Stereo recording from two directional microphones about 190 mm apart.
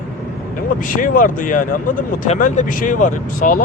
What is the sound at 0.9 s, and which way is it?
Speech, 45° left (ahead or behind).